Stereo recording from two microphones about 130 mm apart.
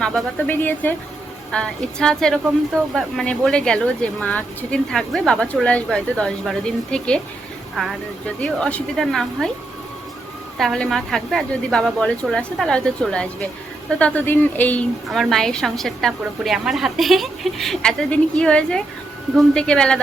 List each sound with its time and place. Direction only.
0.0 s a woman's voice: 10° left (ahead or behind)
10.6 s a woman's voice: centre (ahead or behind)
15.1 s a woman's voice: centre (ahead or behind)